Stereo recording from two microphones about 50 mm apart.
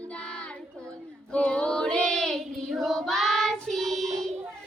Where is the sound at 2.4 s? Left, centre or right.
Centre.